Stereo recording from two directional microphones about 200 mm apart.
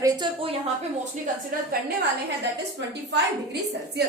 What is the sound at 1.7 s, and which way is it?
Speech, 50° right (ahead or behind).